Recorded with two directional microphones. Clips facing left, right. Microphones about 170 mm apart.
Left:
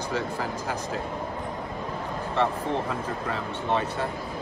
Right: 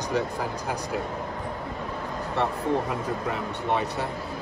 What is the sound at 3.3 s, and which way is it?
Speech, 15° right (ahead or behind).